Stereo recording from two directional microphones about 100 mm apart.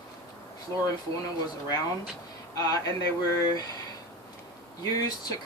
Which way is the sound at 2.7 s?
35° left (ahead or behind).